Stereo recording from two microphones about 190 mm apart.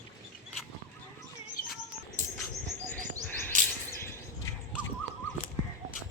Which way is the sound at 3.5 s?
45° right (ahead or behind).